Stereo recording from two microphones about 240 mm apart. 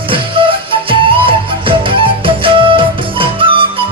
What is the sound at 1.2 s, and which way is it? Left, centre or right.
Music, right.